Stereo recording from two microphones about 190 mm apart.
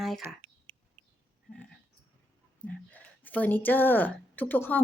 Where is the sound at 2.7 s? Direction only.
10° left (ahead or behind).